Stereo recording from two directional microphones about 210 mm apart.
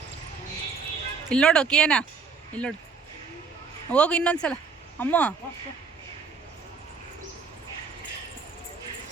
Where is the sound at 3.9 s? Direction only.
5° left (ahead or behind).